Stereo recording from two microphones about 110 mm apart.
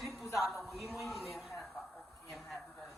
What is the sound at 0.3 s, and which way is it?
Speech, centre (ahead or behind).